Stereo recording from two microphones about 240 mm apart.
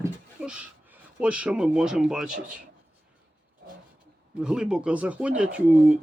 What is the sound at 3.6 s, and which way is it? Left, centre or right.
Roaring cats, right.